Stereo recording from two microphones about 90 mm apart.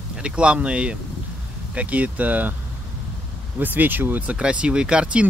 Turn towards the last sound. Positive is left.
turn(degrees=-10)  # may be behind; listen again after turning